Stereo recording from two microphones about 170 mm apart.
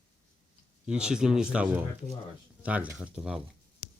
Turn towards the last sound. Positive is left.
turn(degrees=-5)  # may be behind; listen again after turning